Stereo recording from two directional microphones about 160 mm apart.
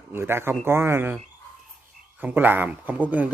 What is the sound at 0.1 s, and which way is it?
Speech, 15° right (ahead or behind).